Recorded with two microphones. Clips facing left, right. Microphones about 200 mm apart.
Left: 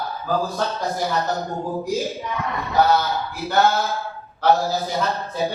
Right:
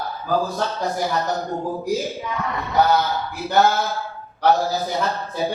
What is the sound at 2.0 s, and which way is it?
Speech, centre (ahead or behind).